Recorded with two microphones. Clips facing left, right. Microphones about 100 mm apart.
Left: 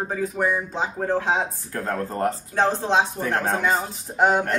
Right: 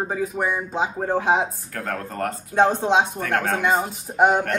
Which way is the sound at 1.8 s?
25° left (ahead or behind).